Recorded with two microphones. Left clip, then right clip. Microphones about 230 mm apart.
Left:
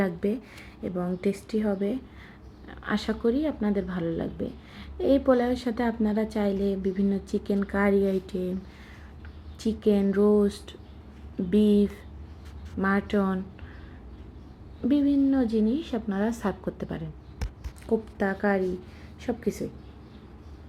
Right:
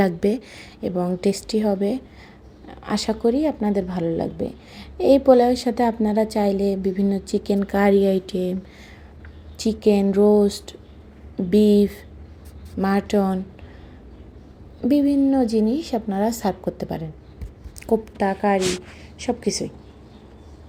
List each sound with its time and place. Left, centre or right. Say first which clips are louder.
0.0 s a woman's voice: right 8 dB; right
9.8 s speech: right 6 dB; centre
14.8 s a woman's voice: right 5 dB; centre